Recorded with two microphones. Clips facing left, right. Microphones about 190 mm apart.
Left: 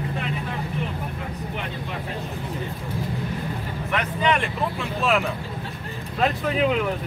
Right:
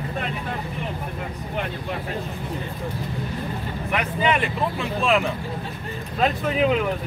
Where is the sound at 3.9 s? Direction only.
5° right (ahead or behind).